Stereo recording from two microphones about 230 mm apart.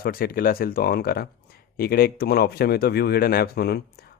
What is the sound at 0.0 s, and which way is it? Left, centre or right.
Speech, left.